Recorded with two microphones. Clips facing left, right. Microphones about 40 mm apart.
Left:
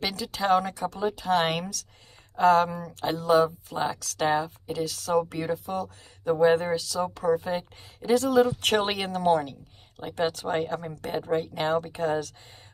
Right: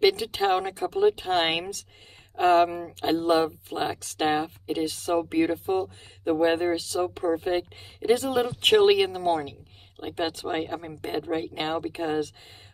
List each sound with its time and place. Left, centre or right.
0.0 s speech: right
7.5 s speech: centre
8.8 s speech: centre
9.9 s speech: centre